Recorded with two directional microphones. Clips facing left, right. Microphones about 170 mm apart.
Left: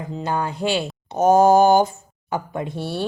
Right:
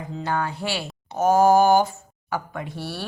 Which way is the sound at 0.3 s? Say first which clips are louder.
Left 4 dB; 20° left (ahead or behind).